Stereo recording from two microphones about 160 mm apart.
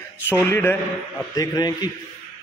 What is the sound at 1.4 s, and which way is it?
Speech, 25° left (ahead or behind).